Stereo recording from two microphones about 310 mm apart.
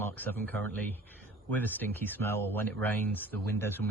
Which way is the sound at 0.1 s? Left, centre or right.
Centre.